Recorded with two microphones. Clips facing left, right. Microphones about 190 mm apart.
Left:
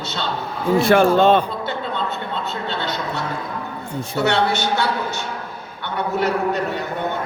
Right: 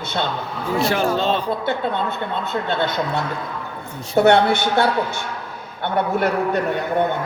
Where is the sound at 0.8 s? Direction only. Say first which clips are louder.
Left 6 dB; 55° left (ahead or behind).